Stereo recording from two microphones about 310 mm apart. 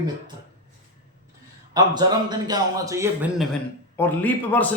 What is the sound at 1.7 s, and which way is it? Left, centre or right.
A man's voice, centre.